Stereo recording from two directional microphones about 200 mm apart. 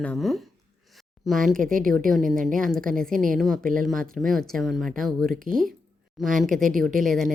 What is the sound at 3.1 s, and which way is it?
Speech, 40° right (ahead or behind).